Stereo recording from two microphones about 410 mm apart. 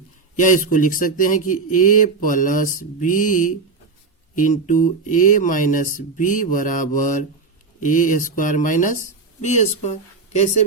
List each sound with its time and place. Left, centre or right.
0.3 s speech: centre
0.7 s mantra: centre
9.4 s speech: centre